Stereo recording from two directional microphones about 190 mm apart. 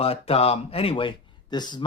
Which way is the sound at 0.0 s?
30° left (ahead or behind).